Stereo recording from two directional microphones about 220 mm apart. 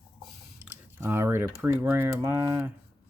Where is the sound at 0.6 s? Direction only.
10° right (ahead or behind).